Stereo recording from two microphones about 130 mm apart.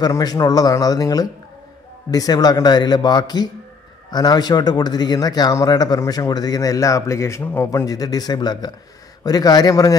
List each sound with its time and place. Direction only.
0.0 s a man's voice: 30° left (ahead or behind)